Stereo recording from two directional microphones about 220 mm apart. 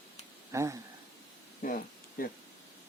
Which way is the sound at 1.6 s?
35° left (ahead or behind).